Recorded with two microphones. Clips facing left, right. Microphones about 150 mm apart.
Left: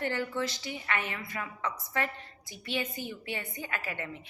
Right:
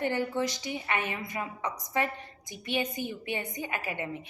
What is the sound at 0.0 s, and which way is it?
A woman's voice, 15° right (ahead or behind).